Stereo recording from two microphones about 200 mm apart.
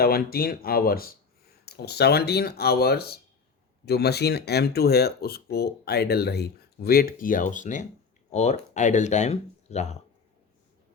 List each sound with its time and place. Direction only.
0.0 s speech: 50° left (ahead or behind)